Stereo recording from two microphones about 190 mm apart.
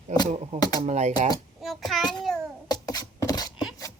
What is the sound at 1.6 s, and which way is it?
Child singing, centre (ahead or behind).